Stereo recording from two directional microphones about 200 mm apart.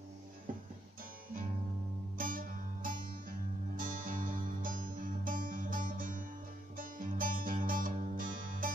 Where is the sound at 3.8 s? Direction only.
45° right (ahead or behind).